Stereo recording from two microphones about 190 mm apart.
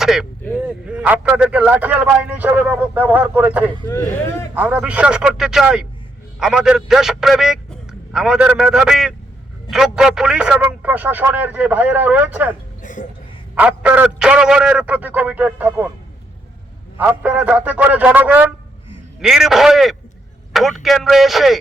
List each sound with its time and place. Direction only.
0.0 s a man's voice: centre (ahead or behind)
12.8 s a sound: 40° left (ahead or behind)
13.6 s speech: 5° right (ahead or behind)
17.0 s a man's voice: 10° right (ahead or behind)